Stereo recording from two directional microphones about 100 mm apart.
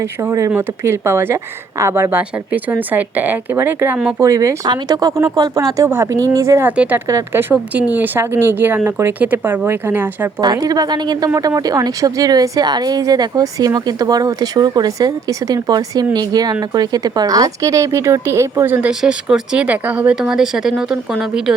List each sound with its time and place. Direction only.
0.0 s speech: 30° right (ahead or behind)
4.2 s speech: 30° right (ahead or behind)
6.7 s speech: 15° right (ahead or behind)
7.1 s speech: 30° right (ahead or behind)
7.5 s speech: 15° right (ahead or behind)
10.4 s speech: 40° right (ahead or behind); by 18.9 s 20° right (ahead or behind)
18.9 s speech: 10° right (ahead or behind)